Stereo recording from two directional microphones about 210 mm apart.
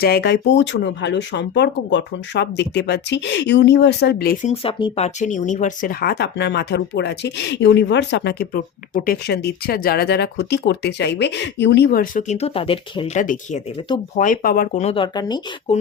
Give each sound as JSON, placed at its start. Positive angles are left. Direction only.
{"t": 0.0, "sound": "speech", "side_deg": 50}
{"t": 4.4, "sound": "speech", "side_deg": 25}
{"t": 13.2, "sound": "speech", "side_deg": 40}